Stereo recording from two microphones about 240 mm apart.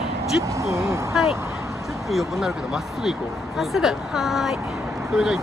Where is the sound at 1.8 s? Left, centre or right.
Centre.